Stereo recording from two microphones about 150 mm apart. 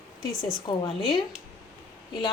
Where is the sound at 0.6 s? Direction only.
35° left (ahead or behind).